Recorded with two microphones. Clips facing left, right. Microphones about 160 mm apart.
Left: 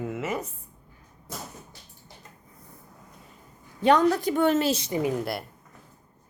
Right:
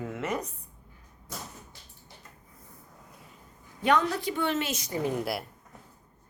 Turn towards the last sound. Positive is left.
turn(degrees=0)  # may be behind; listen again after turning